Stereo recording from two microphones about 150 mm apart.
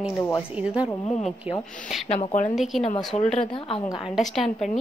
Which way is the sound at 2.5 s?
Centre (ahead or behind).